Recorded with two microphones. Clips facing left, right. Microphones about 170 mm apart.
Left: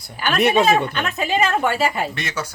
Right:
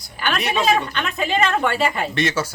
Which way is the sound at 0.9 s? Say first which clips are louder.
Even; 5° left (ahead or behind).